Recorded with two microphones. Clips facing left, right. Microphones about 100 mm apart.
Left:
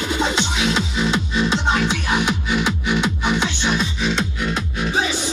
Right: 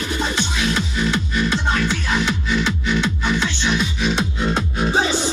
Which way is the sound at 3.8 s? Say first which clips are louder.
Right 1 dB; centre (ahead or behind).